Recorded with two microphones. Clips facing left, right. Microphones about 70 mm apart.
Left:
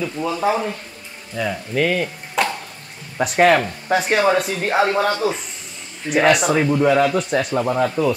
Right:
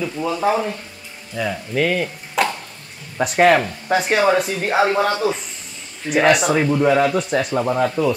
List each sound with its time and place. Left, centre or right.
0.0 s speech: centre